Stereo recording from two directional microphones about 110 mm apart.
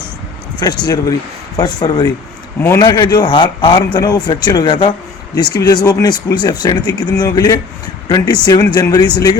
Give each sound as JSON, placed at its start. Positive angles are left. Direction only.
{"t": 0.6, "sound": "speech", "side_deg": 40}
{"t": 2.6, "sound": "a man's voice", "side_deg": 25}
{"t": 2.8, "sound": "speech", "side_deg": 40}